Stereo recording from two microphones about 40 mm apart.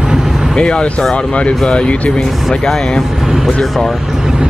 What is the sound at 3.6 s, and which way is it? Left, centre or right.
Speech, centre.